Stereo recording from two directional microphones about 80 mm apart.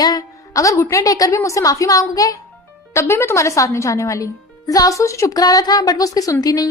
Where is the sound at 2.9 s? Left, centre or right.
Left.